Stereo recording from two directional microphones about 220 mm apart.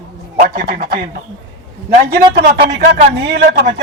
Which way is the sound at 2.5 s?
45° right (ahead or behind).